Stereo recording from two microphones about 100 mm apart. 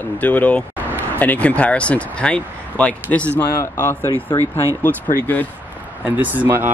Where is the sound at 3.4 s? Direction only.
30° left (ahead or behind).